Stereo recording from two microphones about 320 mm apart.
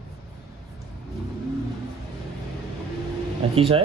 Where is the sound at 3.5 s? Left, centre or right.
Centre.